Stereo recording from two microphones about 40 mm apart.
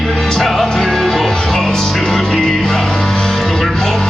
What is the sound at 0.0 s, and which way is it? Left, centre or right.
Music, centre.